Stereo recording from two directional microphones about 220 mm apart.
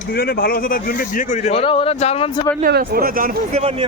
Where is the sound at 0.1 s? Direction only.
45° left (ahead or behind); by 2.4 s 25° left (ahead or behind).